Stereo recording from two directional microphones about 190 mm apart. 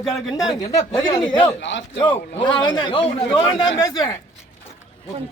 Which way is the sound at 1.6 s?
70° left (ahead or behind).